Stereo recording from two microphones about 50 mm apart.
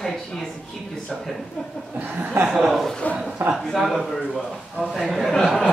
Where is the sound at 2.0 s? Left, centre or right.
Right.